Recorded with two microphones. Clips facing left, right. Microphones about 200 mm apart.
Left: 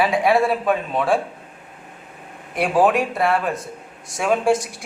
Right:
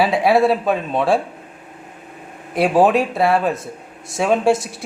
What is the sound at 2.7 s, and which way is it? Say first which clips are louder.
Speech: right 2 dB; 30° right (ahead or behind).